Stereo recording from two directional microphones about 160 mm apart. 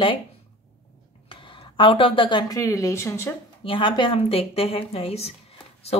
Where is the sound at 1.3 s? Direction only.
30° left (ahead or behind); by 3.3 s 15° left (ahead or behind).